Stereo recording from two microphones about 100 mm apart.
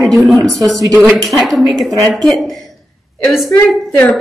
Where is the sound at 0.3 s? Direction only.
Centre (ahead or behind).